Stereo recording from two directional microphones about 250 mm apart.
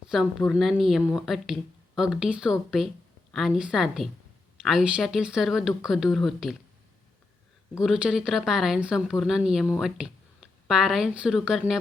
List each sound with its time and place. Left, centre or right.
0.1 s speech: centre
7.8 s speech: centre